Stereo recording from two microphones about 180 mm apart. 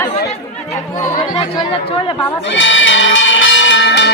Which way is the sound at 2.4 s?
90° left.